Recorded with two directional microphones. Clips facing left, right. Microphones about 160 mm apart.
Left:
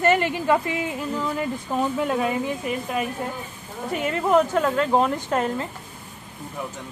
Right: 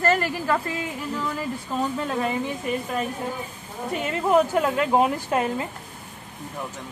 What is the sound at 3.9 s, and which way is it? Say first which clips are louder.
Speech: left 1 dB; centre (ahead or behind).